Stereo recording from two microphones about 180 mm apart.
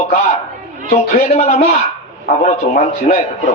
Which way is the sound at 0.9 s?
40° left (ahead or behind).